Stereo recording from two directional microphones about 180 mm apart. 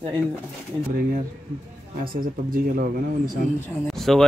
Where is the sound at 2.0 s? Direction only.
55° right (ahead or behind).